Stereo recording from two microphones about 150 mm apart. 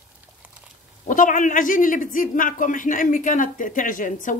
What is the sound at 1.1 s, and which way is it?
A man's voice, 60° left (ahead or behind).